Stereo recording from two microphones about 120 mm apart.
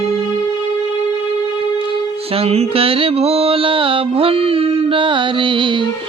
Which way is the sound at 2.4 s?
55° right (ahead or behind).